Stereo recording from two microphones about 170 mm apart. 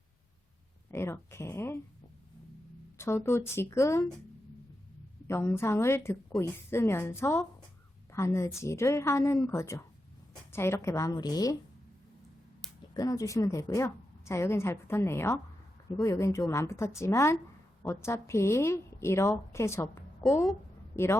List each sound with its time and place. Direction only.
0.9 s a woman's voice: 15° left (ahead or behind)
3.2 s a woman's voice: 15° left (ahead or behind)
5.3 s a woman's voice: 15° left (ahead or behind)
12.9 s a woman's voice: 20° left (ahead or behind)
20.9 s a woman's voice: 15° left (ahead or behind)